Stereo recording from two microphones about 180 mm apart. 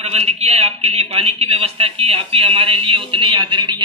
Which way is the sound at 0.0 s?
35° right (ahead or behind).